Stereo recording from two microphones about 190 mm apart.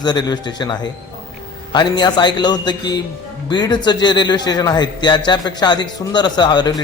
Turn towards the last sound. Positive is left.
turn(degrees=20)  # may be behind; listen again after turning